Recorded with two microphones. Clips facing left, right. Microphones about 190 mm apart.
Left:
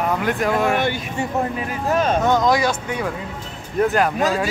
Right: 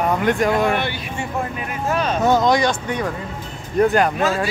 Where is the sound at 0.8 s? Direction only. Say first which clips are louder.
Left 3 dB; 45° left (ahead or behind).